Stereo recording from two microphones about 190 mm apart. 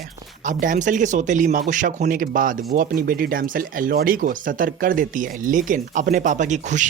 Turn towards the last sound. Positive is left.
turn(degrees=-40)  # may be behind; listen again after turning